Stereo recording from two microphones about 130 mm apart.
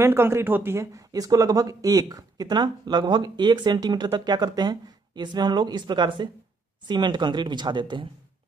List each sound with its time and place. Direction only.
0.0 s speech: 20° right (ahead or behind); by 8.1 s 35° right (ahead or behind)